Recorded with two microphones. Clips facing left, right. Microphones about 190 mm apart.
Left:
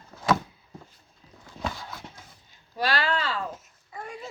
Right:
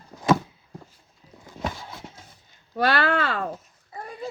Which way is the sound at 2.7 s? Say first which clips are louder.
Right 5 dB; 55° right (ahead or behind).